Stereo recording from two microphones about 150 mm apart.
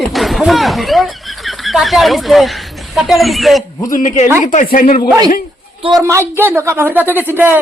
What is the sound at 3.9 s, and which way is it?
Speech, 55° left (ahead or behind).